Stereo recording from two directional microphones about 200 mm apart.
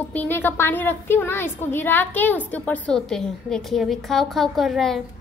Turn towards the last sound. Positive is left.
turn(degrees=0)  # may be behind; listen again after turning